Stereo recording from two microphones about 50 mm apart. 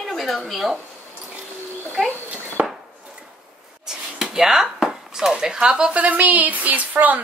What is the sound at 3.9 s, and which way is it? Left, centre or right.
A woman's voice, centre.